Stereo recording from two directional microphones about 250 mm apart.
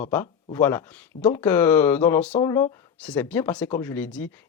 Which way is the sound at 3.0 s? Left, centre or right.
Centre.